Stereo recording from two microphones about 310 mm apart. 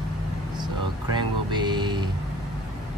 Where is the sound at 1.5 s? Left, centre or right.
Centre.